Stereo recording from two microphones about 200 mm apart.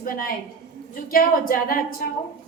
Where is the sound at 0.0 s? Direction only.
45° left (ahead or behind).